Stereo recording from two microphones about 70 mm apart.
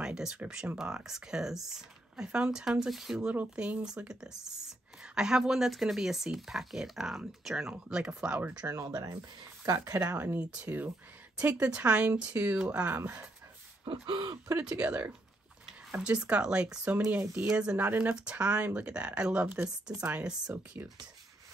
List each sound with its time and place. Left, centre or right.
0.0 s speech: centre
3.3 s speech: centre
8.8 s speech: right
9.8 s speech: right
10.1 s speech: right
10.4 s speech: centre
14.1 s speech: right
14.8 s speech: right
20.5 s speech: right